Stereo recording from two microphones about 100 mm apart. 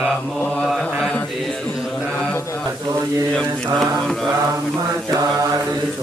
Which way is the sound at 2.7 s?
30° right (ahead or behind).